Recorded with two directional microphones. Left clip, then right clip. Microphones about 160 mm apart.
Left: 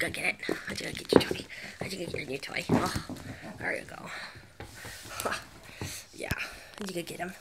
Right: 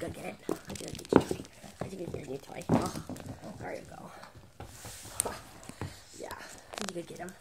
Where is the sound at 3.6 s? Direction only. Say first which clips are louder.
Left 8 dB; 25° left (ahead or behind).